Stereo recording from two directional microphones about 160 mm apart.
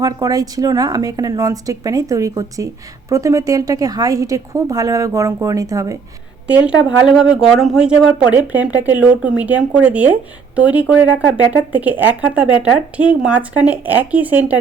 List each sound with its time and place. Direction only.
0.0 s a woman's voice: 25° right (ahead or behind)
6.5 s speech: 10° right (ahead or behind)